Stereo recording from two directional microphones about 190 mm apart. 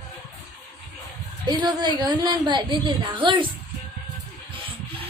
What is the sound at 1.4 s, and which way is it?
A woman's voice, 25° right (ahead or behind).